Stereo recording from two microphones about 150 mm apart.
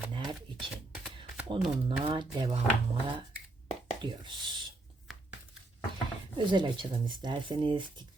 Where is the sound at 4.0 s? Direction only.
30° right (ahead or behind).